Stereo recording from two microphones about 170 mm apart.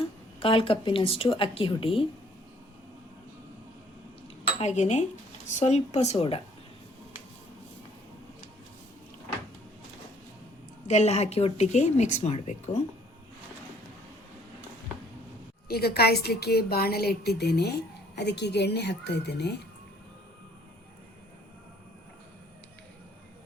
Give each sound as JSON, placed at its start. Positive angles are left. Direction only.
{"t": 0.4, "sound": "speech", "side_deg": 30}
{"t": 4.6, "sound": "speech", "side_deg": 40}
{"t": 10.8, "sound": "speech", "side_deg": 40}
{"t": 15.7, "sound": "a woman's voice", "side_deg": 70}